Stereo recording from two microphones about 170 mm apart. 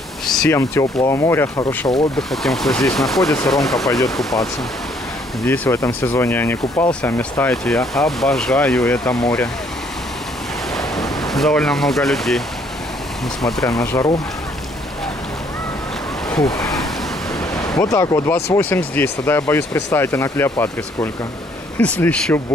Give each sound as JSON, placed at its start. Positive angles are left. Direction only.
{"t": 0.5, "sound": "speech", "side_deg": 15}
{"t": 2.1, "sound": "speech", "side_deg": 0}
{"t": 5.4, "sound": "speech", "side_deg": 15}
{"t": 10.7, "sound": "a sound", "side_deg": 0}
{"t": 13.4, "sound": "speech", "side_deg": 0}
{"t": 13.7, "sound": "speech", "side_deg": 20}
{"t": 16.3, "sound": "a sound", "side_deg": 5}
{"t": 17.6, "sound": "speech", "side_deg": 20}